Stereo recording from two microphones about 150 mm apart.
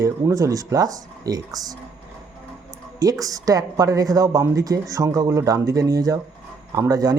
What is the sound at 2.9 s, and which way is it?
Speech, 25° right (ahead or behind).